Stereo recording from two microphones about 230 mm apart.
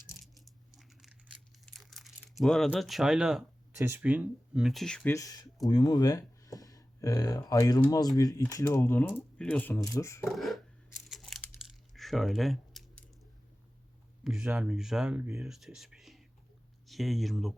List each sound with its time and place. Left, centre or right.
0.8 s crumpling: centre
3.8 s speech: centre
5.1 s speech: centre
10.2 s a sound: centre
14.3 s speech: centre